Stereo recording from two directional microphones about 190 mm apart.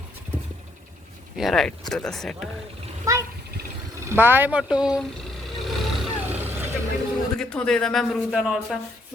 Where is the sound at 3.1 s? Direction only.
15° right (ahead or behind).